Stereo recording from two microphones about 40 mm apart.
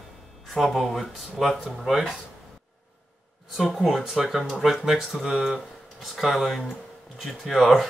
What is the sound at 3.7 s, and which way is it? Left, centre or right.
Speech, centre.